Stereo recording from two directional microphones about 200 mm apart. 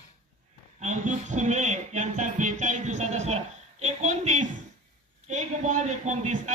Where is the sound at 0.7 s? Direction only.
35° right (ahead or behind).